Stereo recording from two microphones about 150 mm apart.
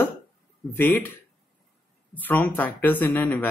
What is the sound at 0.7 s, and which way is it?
Speech, 10° left (ahead or behind).